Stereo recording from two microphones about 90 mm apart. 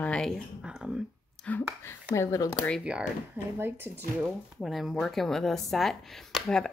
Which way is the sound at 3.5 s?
25° right (ahead or behind).